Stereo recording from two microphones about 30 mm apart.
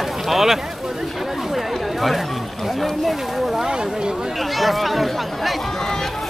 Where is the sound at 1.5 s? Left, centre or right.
Centre.